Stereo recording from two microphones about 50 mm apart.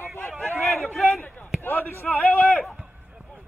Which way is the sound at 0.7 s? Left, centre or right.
Centre.